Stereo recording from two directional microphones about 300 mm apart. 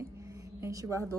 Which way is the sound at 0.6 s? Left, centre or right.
Centre.